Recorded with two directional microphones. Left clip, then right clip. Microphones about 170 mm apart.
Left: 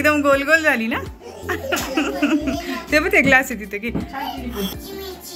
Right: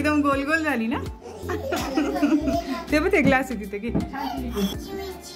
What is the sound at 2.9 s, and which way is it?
A woman's voice, 15° right (ahead or behind).